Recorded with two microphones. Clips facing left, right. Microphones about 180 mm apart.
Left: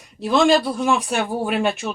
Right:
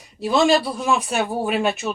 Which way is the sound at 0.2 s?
5° right (ahead or behind).